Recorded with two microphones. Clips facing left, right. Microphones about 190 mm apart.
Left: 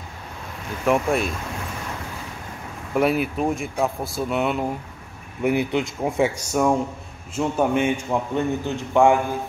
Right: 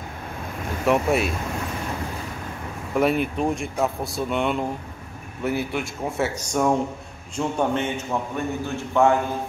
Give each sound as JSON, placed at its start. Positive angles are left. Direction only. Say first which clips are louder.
{"t": 0.8, "sound": "speech", "louder": "even", "side_deg": 0}
{"t": 2.9, "sound": "speech", "louder": "left 1 dB", "side_deg": 5}
{"t": 5.4, "sound": "a man's voice", "louder": "left 4 dB", "side_deg": 20}